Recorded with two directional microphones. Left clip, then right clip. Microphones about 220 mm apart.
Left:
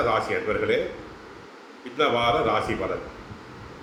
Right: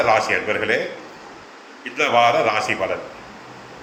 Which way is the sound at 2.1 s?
40° right (ahead or behind).